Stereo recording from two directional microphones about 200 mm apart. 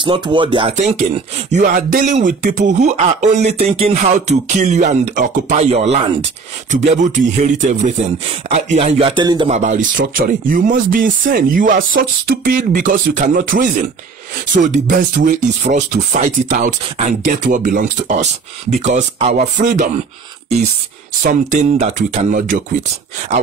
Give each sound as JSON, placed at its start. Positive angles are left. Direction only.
{"t": 0.0, "sound": "speech", "side_deg": -25}
{"t": 1.5, "sound": "speech", "side_deg": -40}
{"t": 9.5, "sound": "speech", "side_deg": -40}
{"t": 21.2, "sound": "speech", "side_deg": -40}